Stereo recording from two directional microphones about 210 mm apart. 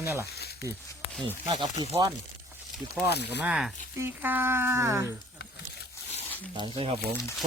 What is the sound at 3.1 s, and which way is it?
Speech, 50° left (ahead or behind).